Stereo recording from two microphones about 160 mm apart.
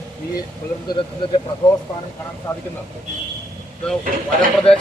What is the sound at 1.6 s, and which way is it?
Speech, 25° left (ahead or behind).